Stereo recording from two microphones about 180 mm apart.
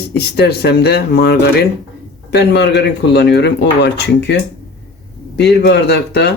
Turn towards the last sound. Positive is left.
turn(degrees=70)  # may be behind; listen again after turning